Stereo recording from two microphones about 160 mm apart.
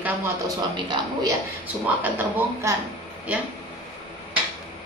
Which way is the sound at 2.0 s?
10° right (ahead or behind).